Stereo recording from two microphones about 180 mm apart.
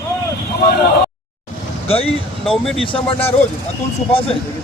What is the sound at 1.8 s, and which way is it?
Speech, 30° left (ahead or behind).